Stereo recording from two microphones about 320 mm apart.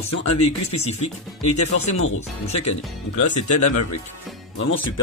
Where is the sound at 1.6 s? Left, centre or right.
Left.